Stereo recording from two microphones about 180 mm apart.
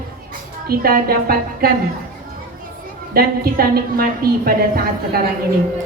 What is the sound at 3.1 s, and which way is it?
Speech, 55° right (ahead or behind).